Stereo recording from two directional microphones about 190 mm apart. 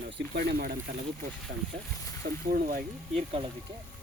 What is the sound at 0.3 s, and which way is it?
Speech, 55° right (ahead or behind).